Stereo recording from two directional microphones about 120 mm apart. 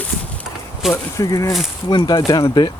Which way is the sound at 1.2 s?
30° left (ahead or behind).